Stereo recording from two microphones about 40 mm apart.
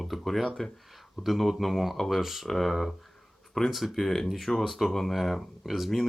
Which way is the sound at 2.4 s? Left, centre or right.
Centre.